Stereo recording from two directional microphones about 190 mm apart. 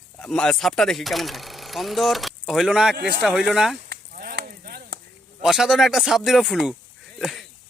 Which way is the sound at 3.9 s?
50° right (ahead or behind).